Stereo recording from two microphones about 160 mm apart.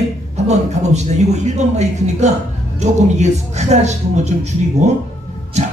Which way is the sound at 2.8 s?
45° right (ahead or behind).